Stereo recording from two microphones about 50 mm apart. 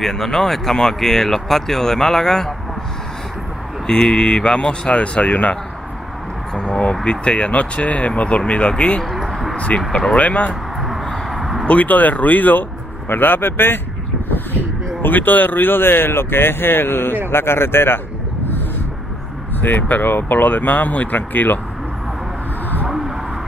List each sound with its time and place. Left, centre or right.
0.0 s speech: centre
3.8 s speech: centre
11.2 s a sound: centre
11.6 s speech: left
19.6 s speech: left
22.8 s a sound: centre